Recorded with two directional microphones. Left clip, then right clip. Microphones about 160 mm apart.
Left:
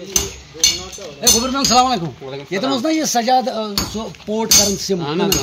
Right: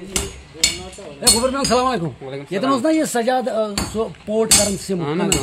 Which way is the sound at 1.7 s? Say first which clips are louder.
Left 4 dB; 15° right (ahead or behind).